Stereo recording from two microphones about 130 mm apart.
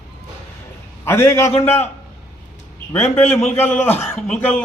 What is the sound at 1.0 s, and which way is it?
Speech, 20° left (ahead or behind).